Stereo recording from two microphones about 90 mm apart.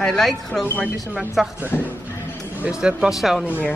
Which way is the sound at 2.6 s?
10° right (ahead or behind).